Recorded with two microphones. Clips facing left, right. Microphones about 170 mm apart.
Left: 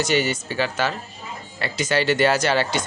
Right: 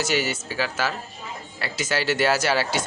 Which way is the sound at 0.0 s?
5° right (ahead or behind).